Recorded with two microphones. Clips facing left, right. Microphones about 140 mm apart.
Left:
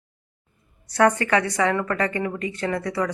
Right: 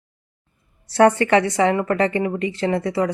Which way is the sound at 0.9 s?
30° right (ahead or behind).